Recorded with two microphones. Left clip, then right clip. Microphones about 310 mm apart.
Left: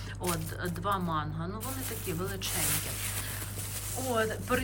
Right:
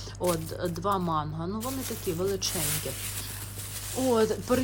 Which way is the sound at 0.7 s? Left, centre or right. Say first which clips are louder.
Right 3 dB; centre.